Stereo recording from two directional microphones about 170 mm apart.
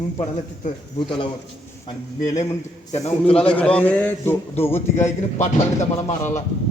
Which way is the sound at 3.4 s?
10° left (ahead or behind).